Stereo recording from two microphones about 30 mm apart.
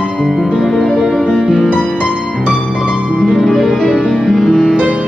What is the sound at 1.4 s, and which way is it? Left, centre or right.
Music, centre.